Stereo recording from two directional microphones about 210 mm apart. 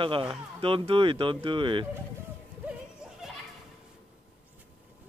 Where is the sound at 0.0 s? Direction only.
25° right (ahead or behind).